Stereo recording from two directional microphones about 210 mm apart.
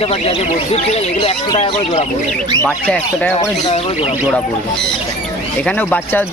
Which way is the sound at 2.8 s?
5° left (ahead or behind).